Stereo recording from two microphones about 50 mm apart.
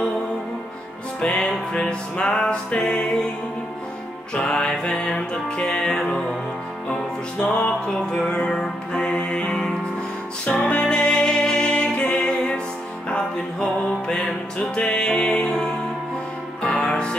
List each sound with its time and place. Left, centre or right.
1.2 s music: left
4.4 s music: centre